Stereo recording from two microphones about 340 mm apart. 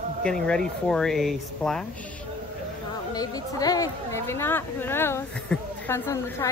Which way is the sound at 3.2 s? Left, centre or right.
Centre.